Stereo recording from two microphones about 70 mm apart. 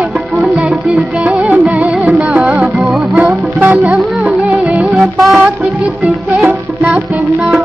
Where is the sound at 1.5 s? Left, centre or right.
Centre.